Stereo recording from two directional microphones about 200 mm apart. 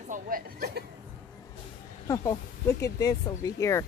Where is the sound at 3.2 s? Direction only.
15° left (ahead or behind).